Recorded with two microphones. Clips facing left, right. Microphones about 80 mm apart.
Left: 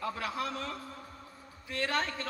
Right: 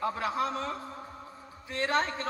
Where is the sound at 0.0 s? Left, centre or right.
Right.